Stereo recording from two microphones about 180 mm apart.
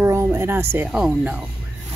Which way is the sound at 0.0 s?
15° right (ahead or behind).